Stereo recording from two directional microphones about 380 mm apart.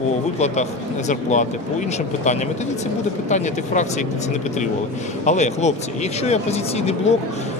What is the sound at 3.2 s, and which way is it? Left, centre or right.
Speech, centre.